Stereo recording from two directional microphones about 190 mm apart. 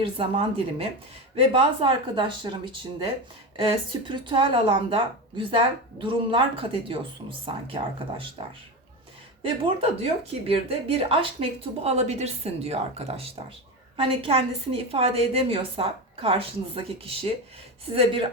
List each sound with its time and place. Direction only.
0.0 s a woman's voice: 30° right (ahead or behind)
3.6 s a woman's voice: 25° right (ahead or behind)
9.4 s a woman's voice: 30° right (ahead or behind)